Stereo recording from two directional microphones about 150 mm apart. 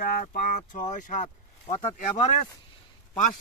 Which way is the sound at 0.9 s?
55° left (ahead or behind).